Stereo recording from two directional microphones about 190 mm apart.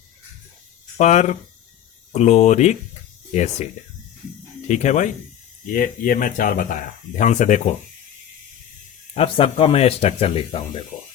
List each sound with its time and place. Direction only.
0.9 s a man's voice: 35° left (ahead or behind)
4.7 s a man's voice: 40° left (ahead or behind)
9.1 s a man's voice: 30° left (ahead or behind)